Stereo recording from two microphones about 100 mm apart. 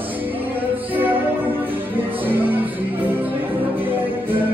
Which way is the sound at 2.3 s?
20° right (ahead or behind).